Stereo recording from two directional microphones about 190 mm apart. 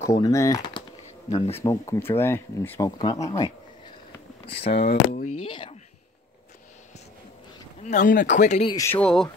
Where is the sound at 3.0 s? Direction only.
20° left (ahead or behind).